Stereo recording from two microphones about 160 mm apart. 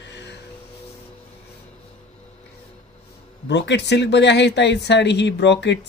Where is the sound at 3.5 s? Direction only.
90° left.